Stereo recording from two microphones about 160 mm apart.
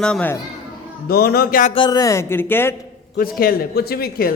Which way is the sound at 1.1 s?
75° left (ahead or behind).